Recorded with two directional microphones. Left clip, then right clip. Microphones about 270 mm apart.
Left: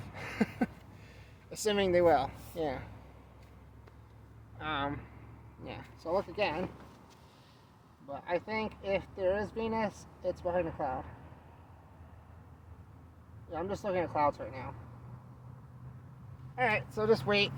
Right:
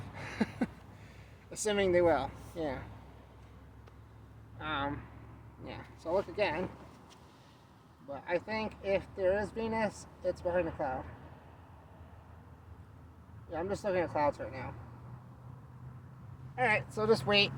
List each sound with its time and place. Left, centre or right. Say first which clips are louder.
0.0 s a sound: left 2 dB; left
1.5 s a woman's voice: even; left
4.5 s a sound: left 1 dB; left
5.6 s a woman's voice: left 1 dB; left
8.1 s speech: even; centre
13.5 s speech: right 1 dB; centre
16.6 s speech: even; centre